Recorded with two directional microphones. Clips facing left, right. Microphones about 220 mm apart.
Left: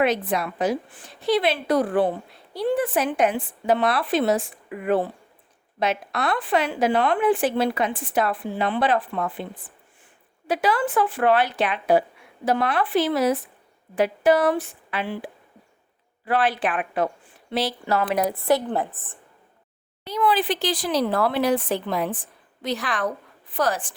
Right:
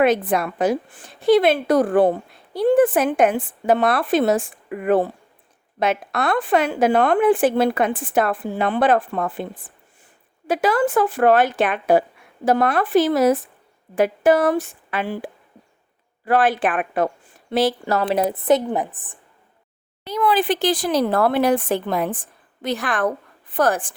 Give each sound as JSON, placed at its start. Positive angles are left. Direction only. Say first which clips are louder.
{"t": 0.0, "sound": "a woman's voice", "louder": "right 4 dB", "side_deg": -50}
{"t": 18.0, "sound": "a woman's voice", "louder": "right 3 dB", "side_deg": -25}
{"t": 20.1, "sound": "a woman's voice", "louder": "right 3 dB", "side_deg": -45}